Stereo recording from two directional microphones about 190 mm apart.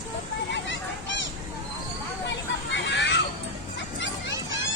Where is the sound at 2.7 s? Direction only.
70° left (ahead or behind).